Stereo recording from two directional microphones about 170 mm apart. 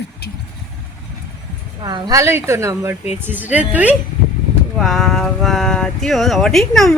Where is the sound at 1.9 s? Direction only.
25° right (ahead or behind).